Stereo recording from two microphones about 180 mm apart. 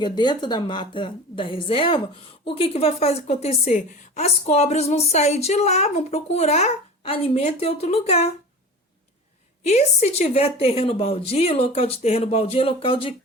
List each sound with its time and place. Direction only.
0.0 s a woman's voice: 25° left (ahead or behind)
9.6 s a woman's voice: 35° left (ahead or behind)